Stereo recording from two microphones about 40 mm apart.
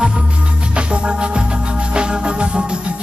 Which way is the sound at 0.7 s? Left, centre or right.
Right.